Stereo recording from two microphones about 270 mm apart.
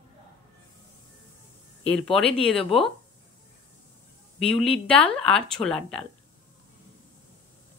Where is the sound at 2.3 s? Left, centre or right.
Left.